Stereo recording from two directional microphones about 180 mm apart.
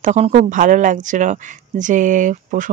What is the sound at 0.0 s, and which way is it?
Speech, 40° right (ahead or behind).